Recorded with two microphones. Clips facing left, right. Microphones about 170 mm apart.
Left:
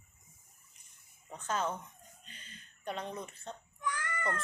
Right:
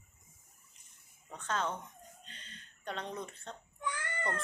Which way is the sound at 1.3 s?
10° left (ahead or behind).